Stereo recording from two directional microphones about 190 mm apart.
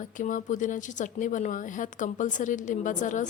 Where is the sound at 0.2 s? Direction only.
40° left (ahead or behind).